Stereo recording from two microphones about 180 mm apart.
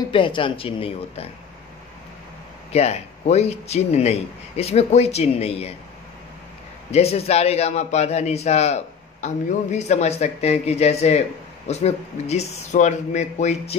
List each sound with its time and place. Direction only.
0.1 s speech: 30° left (ahead or behind)
2.7 s a man's voice: 35° left (ahead or behind)
6.9 s a man's voice: 35° left (ahead or behind)